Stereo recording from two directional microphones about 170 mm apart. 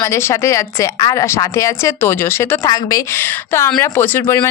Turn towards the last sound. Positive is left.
turn(degrees=15)  # may be behind; listen again after turning